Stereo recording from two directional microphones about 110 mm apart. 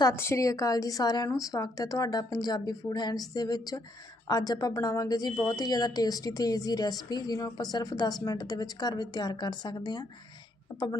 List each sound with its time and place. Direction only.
0.2 s a woman's voice: 25° left (ahead or behind); by 10.1 s 40° left (ahead or behind)
10.7 s a woman's voice: 25° left (ahead or behind)